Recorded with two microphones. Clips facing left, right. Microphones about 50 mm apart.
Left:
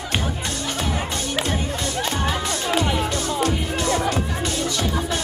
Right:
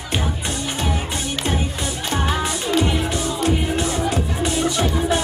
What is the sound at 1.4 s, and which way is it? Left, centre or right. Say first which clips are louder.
Music: right 1 dB; centre.